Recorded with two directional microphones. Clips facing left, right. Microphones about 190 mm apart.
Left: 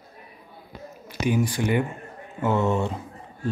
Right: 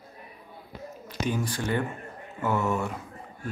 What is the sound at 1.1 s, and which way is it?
Speech, 10° left (ahead or behind).